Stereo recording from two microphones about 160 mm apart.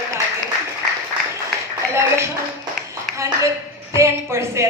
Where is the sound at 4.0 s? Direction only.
15° right (ahead or behind).